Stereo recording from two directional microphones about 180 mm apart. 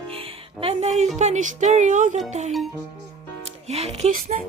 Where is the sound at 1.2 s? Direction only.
45° right (ahead or behind).